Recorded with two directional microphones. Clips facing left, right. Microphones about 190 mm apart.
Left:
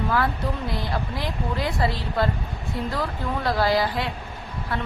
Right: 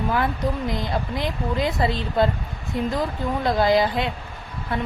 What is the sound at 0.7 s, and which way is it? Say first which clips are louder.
Speech: right 3 dB; 20° right (ahead or behind).